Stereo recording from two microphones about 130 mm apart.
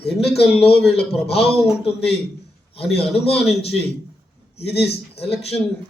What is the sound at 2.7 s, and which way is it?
Speech, 50° left (ahead or behind).